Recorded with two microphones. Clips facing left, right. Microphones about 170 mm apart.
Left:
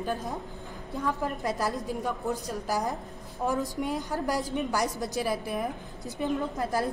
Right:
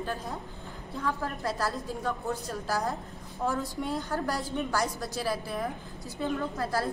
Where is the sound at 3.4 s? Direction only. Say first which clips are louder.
Left 2 dB; 15° left (ahead or behind).